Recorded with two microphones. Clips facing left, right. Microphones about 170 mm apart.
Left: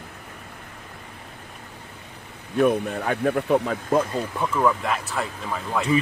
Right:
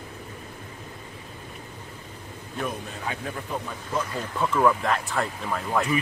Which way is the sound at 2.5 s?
60° left (ahead or behind).